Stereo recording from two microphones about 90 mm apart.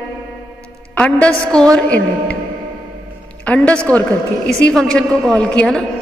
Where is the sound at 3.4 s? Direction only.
15° left (ahead or behind).